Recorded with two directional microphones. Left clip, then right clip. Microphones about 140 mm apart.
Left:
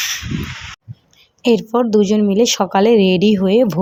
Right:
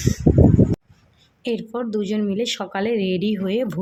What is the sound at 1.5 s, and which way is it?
A woman's voice, 35° left (ahead or behind).